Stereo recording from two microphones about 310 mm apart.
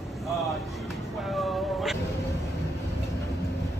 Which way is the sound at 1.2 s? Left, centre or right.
Centre.